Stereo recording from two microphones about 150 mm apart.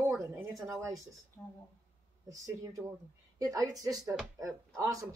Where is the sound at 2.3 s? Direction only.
20° right (ahead or behind).